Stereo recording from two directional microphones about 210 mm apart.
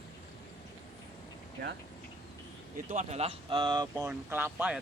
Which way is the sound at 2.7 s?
35° right (ahead or behind).